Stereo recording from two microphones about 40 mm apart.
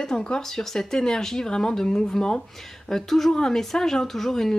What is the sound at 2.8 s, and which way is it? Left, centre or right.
Speech, centre.